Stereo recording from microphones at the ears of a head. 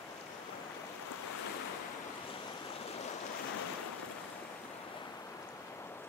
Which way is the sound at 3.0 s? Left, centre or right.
Left.